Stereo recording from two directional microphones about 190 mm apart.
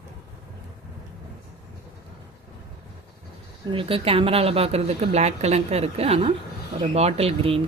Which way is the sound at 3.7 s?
30° right (ahead or behind).